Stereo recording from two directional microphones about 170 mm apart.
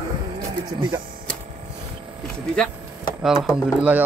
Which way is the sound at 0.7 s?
25° right (ahead or behind).